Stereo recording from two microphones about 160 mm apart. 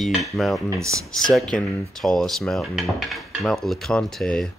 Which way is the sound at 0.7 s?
20° right (ahead or behind).